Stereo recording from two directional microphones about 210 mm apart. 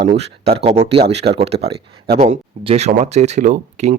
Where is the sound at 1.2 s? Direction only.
40° right (ahead or behind).